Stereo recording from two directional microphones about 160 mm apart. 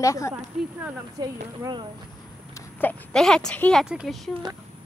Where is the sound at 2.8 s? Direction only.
10° left (ahead or behind).